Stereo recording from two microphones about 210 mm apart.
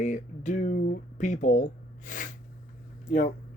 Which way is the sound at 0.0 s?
35° left (ahead or behind).